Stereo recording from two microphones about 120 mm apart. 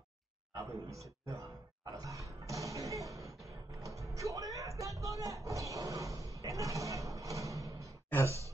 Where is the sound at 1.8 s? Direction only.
30° right (ahead or behind).